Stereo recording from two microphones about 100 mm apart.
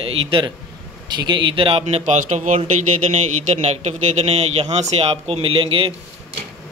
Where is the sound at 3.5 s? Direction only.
90° right; by 5.9 s 65° right (ahead or behind).